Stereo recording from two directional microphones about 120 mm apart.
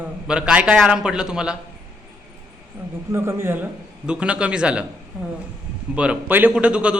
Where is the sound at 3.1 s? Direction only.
20° right (ahead or behind).